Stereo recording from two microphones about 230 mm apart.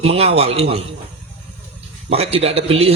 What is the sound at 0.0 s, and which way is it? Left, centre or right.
Speech, right.